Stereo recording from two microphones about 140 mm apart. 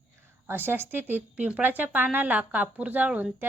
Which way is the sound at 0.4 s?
15° right (ahead or behind).